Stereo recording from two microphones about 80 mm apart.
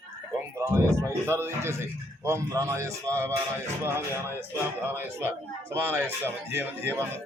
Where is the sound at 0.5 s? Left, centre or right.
Right.